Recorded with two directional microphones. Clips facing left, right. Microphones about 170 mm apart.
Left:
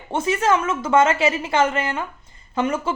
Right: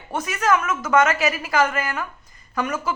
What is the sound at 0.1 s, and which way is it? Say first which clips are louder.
A woman's voice: left 2 dB; 25° left (ahead or behind).